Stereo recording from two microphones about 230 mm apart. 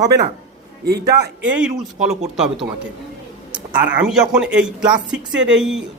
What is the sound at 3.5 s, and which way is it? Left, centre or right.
A man's voice, centre.